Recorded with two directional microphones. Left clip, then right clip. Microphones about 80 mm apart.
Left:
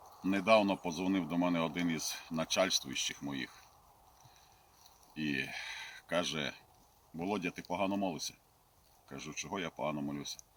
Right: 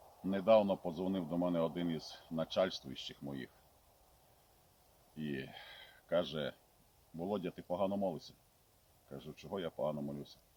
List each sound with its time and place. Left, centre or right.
0.2 s speech: right
5.1 s speech: right